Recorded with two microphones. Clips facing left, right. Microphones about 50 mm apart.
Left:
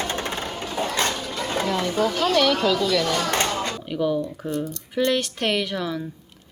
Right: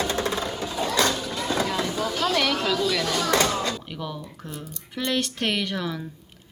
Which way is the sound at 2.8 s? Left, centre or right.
Left.